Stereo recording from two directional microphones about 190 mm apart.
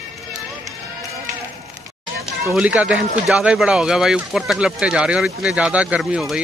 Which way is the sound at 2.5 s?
5° right (ahead or behind).